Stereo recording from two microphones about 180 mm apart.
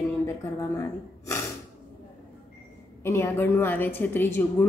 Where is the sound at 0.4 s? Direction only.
20° left (ahead or behind).